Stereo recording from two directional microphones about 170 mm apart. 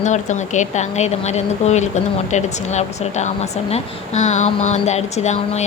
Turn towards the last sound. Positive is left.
turn(degrees=40)  # may be behind; listen again after turning